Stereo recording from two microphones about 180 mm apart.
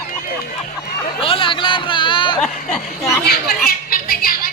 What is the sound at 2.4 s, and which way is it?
Speech, 5° left (ahead or behind).